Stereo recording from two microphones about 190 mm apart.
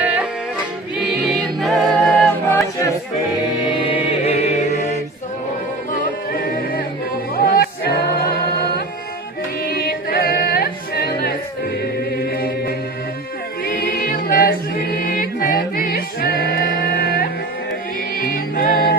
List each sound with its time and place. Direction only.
0.0 s music: 5° right (ahead or behind)
0.9 s a capella: centre (ahead or behind)
3.7 s music: 25° left (ahead or behind)
5.9 s music: 50° left (ahead or behind)
12.2 s a capella: 50° left (ahead or behind)
13.7 s music: 55° left (ahead or behind)